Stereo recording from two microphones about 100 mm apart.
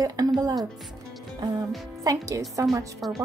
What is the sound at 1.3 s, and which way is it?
Music, 40° right (ahead or behind).